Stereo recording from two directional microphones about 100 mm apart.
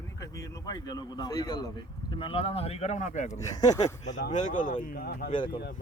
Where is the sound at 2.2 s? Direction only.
70° left (ahead or behind); by 2.9 s 90° left.